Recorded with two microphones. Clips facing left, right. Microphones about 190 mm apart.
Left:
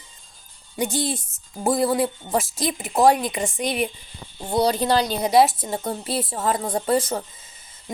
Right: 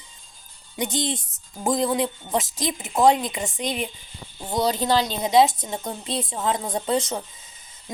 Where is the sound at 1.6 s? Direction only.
5° left (ahead or behind).